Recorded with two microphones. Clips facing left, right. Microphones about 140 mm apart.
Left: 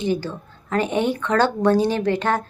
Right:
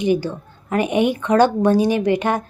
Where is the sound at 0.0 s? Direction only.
15° right (ahead or behind).